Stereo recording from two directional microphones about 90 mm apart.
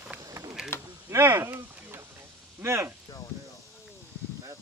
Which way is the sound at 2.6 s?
30° right (ahead or behind).